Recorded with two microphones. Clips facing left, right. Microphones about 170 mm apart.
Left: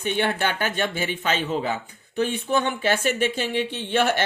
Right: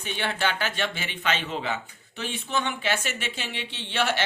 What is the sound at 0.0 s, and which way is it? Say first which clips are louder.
Speech: left 5 dB; 50° left (ahead or behind).